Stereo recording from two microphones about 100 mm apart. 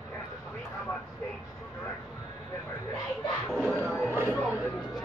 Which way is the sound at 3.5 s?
10° left (ahead or behind).